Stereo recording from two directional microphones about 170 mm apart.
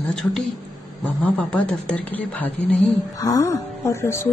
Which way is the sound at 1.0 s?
10° left (ahead or behind).